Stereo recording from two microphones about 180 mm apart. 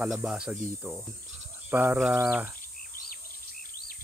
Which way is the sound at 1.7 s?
10° right (ahead or behind).